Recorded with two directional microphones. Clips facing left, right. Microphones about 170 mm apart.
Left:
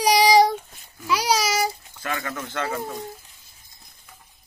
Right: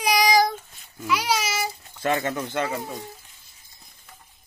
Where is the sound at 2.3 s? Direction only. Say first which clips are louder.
Right 3 dB; 15° right (ahead or behind).